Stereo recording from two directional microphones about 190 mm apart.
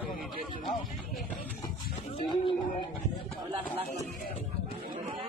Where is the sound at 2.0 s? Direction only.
25° left (ahead or behind).